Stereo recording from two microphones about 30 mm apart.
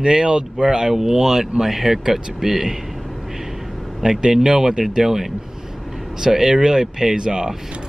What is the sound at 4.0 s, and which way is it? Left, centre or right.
Speech, right.